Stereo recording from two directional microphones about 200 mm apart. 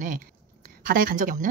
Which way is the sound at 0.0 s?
40° right (ahead or behind).